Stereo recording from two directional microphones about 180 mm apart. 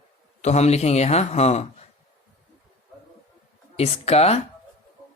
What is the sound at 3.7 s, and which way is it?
Speech, 35° left (ahead or behind).